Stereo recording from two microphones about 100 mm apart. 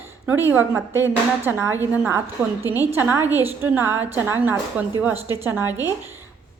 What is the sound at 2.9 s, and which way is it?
A woman's voice, 25° right (ahead or behind).